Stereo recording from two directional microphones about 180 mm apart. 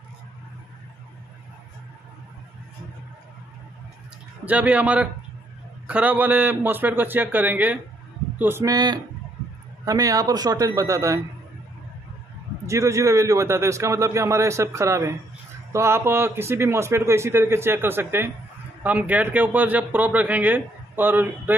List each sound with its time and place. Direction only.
4.5 s a man's voice: 10° right (ahead or behind)
12.6 s a man's voice: 15° right (ahead or behind)